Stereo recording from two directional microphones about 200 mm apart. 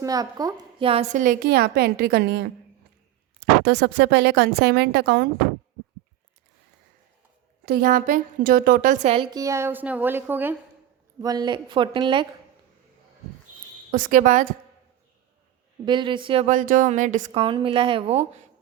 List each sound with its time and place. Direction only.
0.0 s a woman's voice: 20° right (ahead or behind)
1.2 s a woman's voice: 45° right (ahead or behind)
3.6 s speech: 60° right (ahead or behind)
7.6 s a woman's voice: 50° right (ahead or behind)
9.3 s a woman's voice: 15° right (ahead or behind)
13.9 s a woman's voice: 40° right (ahead or behind)
15.9 s a woman's voice: 25° right (ahead or behind)
16.5 s a woman's voice: 40° right (ahead or behind)